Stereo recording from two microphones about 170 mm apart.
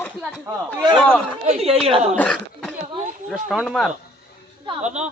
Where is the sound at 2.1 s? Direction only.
5° left (ahead or behind).